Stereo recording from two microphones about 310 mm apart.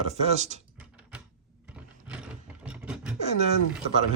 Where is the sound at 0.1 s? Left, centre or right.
Right.